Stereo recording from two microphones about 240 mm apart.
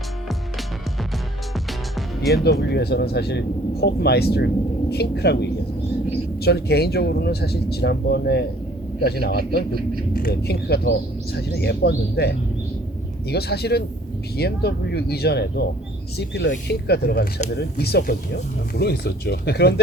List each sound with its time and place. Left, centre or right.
1.5 s music: centre
2.3 s speech: left